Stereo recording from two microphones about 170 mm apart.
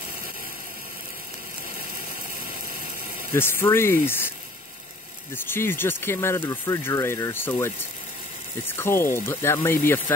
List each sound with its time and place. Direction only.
2.7 s ratchet: 55° left (ahead or behind)
3.3 s speech: 15° left (ahead or behind)
5.3 s speech: 15° left (ahead or behind)